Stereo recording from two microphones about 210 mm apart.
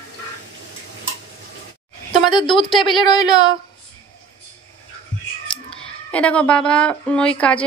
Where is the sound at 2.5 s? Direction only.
Centre (ahead or behind).